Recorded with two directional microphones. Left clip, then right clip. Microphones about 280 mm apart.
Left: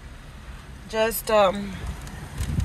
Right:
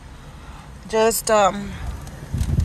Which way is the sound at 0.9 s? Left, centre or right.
Centre.